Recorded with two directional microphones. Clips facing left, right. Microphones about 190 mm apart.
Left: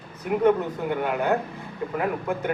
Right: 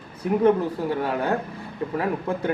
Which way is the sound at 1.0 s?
35° right (ahead or behind).